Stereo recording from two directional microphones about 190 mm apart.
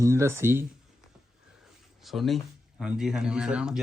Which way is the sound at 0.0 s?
15° right (ahead or behind).